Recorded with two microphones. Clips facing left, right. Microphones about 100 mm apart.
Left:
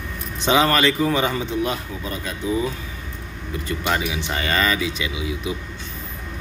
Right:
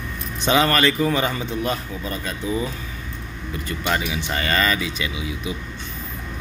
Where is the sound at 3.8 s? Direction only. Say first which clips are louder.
Even; 15° left (ahead or behind).